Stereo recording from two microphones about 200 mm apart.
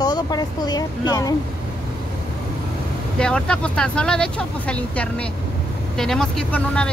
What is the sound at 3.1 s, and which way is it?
Speech, 5° left (ahead or behind).